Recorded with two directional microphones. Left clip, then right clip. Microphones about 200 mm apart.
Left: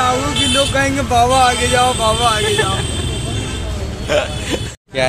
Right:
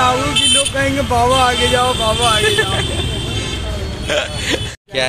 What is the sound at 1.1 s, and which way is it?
Speech, centre (ahead or behind).